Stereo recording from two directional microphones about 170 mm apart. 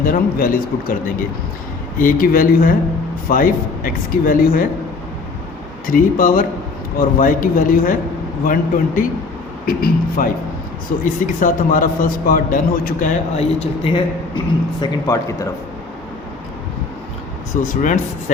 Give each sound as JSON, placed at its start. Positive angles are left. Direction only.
{"t": 0.0, "sound": "speech", "side_deg": 55}
{"t": 2.0, "sound": "speech", "side_deg": 55}
{"t": 5.8, "sound": "a man's voice", "side_deg": 55}
{"t": 11.3, "sound": "a man's voice", "side_deg": 50}
{"t": 14.8, "sound": "speech", "side_deg": 20}
{"t": 17.5, "sound": "a man's voice", "side_deg": 50}